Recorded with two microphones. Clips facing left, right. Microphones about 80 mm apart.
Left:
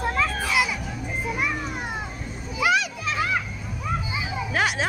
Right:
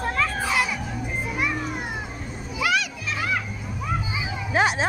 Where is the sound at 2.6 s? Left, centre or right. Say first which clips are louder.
Left 2 dB; left.